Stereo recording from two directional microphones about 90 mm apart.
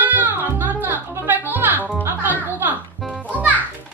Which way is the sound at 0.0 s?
20° right (ahead or behind).